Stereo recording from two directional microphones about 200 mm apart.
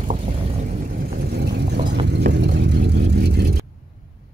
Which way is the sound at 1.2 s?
55° right (ahead or behind).